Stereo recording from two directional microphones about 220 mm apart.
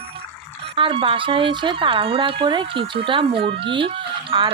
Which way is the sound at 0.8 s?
25° right (ahead or behind).